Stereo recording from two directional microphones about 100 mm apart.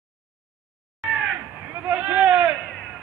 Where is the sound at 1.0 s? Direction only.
10° right (ahead or behind).